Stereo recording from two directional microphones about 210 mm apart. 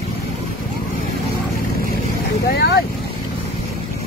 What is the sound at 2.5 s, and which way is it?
Boat, 50° left (ahead or behind).